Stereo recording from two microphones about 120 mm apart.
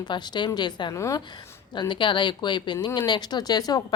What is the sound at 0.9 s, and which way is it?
Speech, 25° left (ahead or behind).